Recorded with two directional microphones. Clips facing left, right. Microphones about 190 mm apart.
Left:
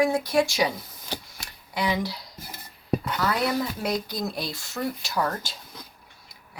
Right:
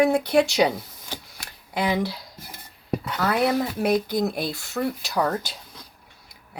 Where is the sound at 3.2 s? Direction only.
55° right (ahead or behind).